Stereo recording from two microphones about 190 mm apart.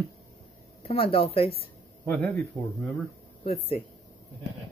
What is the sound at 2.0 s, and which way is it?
Speech, 10° left (ahead or behind).